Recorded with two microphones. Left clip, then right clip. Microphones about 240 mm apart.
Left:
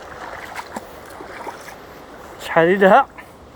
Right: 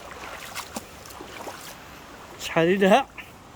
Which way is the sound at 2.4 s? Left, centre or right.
Centre.